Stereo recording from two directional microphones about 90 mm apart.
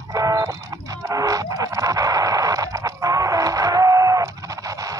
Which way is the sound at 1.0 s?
40° right (ahead or behind).